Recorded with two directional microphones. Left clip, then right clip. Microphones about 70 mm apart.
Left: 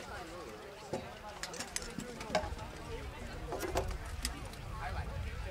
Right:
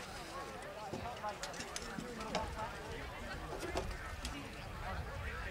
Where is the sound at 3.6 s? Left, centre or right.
Left.